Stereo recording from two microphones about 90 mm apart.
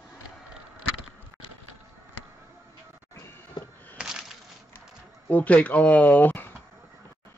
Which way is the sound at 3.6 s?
50° left (ahead or behind).